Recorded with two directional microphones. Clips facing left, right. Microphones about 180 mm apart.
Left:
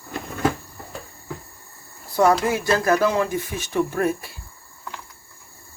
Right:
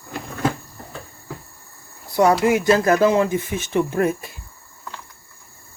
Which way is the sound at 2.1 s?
15° right (ahead or behind).